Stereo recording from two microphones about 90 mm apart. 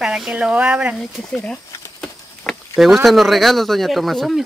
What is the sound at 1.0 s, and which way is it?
Speech, 5° left (ahead or behind).